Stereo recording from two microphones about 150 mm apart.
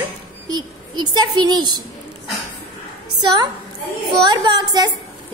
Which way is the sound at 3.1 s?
30° right (ahead or behind).